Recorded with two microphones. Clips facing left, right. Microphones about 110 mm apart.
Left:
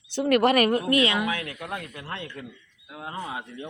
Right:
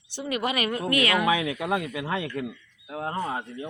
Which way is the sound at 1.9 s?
90° right.